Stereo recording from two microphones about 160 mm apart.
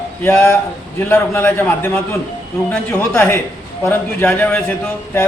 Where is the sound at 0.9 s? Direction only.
15° left (ahead or behind).